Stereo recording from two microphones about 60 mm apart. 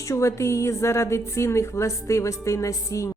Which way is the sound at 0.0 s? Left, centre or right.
Left.